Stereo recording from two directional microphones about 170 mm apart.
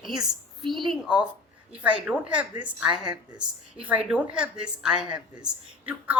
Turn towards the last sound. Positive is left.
turn(degrees=-5)  # may be behind; listen again after turning